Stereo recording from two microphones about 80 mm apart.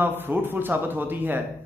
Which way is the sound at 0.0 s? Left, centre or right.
Right.